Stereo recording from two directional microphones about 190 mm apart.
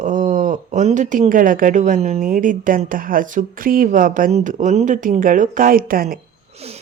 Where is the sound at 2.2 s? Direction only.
45° right (ahead or behind).